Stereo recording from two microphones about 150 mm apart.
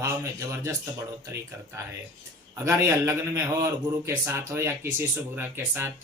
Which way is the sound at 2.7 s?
15° right (ahead or behind).